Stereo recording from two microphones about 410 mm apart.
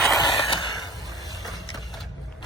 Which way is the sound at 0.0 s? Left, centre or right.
Centre.